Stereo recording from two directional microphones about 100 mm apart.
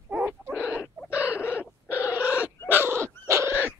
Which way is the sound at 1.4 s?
25° left (ahead or behind).